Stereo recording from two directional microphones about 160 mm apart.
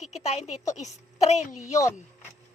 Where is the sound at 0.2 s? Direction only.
45° left (ahead or behind).